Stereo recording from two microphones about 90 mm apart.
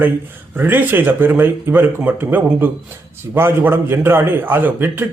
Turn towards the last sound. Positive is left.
turn(degrees=-25)  # may be behind; listen again after turning